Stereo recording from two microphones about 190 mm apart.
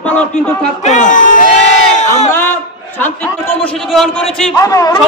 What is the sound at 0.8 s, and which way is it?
Speech, 40° left (ahead or behind).